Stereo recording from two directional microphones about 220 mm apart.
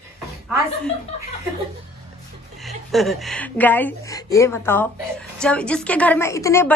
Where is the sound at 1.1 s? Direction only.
25° left (ahead or behind).